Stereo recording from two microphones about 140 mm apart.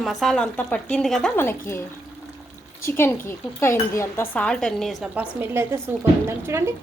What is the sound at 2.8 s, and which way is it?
Dishes, 15° left (ahead or behind).